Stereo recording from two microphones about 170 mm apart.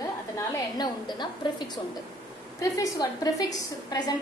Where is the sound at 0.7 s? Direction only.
25° left (ahead or behind).